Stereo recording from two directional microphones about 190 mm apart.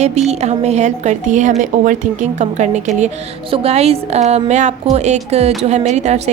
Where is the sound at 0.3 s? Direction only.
35° right (ahead or behind).